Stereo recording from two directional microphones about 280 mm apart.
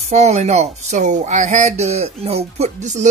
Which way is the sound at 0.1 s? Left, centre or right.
Right.